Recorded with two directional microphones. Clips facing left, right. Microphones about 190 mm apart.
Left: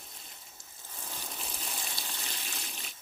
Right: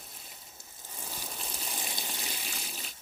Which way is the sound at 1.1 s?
10° right (ahead or behind).